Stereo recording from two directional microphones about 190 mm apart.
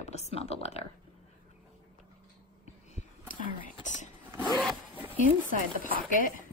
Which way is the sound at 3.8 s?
40° left (ahead or behind).